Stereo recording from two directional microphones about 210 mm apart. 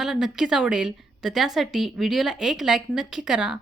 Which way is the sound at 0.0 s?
Centre (ahead or behind).